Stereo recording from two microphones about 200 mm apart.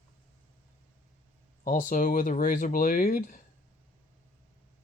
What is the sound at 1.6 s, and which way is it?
Speech, 40° left (ahead or behind).